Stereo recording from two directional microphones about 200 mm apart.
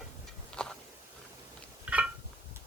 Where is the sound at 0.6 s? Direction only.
5° left (ahead or behind).